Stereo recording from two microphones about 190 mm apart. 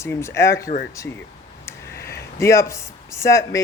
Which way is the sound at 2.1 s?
15° left (ahead or behind).